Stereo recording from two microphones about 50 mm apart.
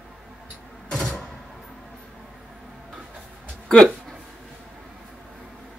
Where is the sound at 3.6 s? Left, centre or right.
Centre.